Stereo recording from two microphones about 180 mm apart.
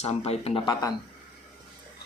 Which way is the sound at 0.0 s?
35° left (ahead or behind).